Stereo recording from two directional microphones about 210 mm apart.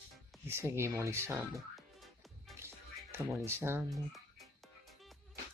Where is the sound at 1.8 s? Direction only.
Centre (ahead or behind).